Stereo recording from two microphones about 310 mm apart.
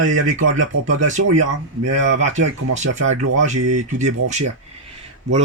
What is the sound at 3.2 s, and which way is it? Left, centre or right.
A man's voice, right.